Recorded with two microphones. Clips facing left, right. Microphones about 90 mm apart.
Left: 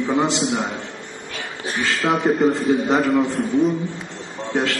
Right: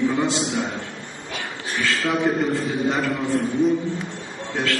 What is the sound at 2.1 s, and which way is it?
Speech, 90° left.